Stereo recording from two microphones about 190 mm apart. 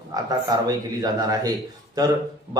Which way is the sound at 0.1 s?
20° right (ahead or behind).